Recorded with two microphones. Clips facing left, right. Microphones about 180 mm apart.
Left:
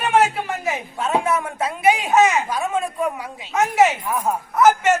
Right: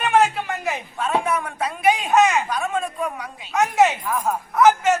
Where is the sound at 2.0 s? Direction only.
5° left (ahead or behind).